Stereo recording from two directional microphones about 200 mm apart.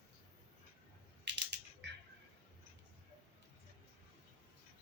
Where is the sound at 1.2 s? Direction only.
60° right (ahead or behind).